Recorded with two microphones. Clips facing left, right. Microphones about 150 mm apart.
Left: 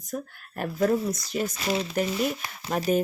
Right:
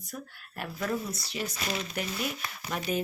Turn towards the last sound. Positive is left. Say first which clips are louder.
# left 7 dB
turn(degrees=40)  # may be behind; listen again after turning